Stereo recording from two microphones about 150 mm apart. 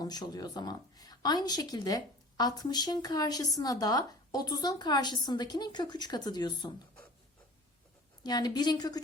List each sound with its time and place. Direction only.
0.0 s a woman's voice: 25° left (ahead or behind)
8.2 s a woman's voice: 25° left (ahead or behind)